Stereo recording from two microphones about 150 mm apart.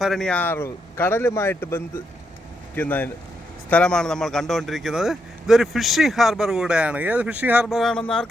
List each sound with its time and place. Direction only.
0.0 s a man's voice: centre (ahead or behind)